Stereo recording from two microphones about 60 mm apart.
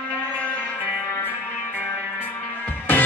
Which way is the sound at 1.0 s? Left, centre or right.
Left.